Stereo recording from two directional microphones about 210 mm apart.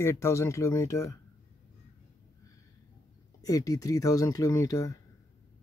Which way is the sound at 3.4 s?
15° left (ahead or behind).